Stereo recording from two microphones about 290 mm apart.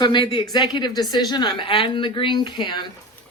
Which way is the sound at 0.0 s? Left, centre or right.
Centre.